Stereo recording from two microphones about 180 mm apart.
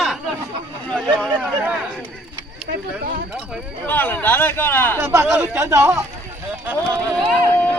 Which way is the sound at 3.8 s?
10° left (ahead or behind).